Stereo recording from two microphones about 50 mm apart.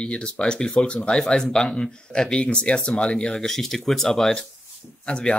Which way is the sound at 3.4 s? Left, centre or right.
Centre.